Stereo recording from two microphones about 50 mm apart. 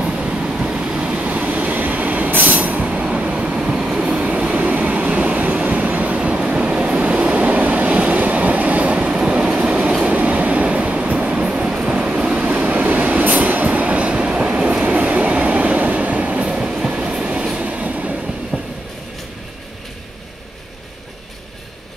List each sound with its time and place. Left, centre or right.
0.0 s vehicle: right
4.6 s train: right
12.4 s vehicle: right
13.2 s train: right; by 17.6 s centre
17.6 s train: right
18.5 s train: centre